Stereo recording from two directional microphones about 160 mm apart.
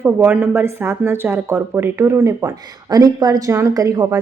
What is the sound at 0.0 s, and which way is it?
A woman's voice, 10° right (ahead or behind).